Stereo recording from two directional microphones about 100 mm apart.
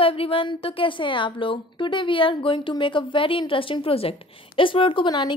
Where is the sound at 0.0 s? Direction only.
65° left (ahead or behind).